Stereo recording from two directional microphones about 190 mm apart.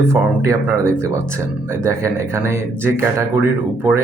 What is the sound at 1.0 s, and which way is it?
Speech, 15° right (ahead or behind).